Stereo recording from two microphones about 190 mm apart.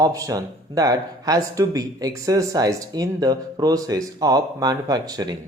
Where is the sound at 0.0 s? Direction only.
20° right (ahead or behind).